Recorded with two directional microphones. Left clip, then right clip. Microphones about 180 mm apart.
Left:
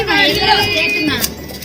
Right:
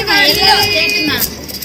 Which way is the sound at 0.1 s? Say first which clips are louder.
Right 3 dB; 35° left (ahead or behind).